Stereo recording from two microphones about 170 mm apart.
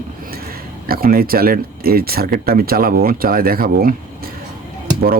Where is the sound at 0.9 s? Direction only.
60° right (ahead or behind).